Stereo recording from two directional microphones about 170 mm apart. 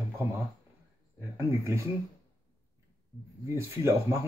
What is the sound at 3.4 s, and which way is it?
Speech, 15° right (ahead or behind).